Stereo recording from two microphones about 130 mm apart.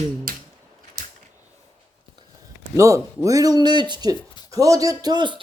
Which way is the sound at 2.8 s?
25° right (ahead or behind).